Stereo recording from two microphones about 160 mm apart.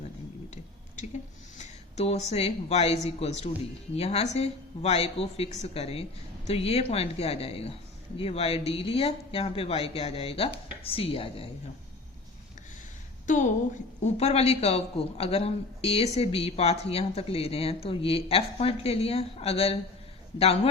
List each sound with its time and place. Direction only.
1.5 s a man's voice: 45° left (ahead or behind)
13.2 s a woman's voice: 55° left (ahead or behind)